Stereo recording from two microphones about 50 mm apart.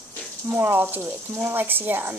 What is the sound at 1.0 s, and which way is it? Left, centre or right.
Speech, right.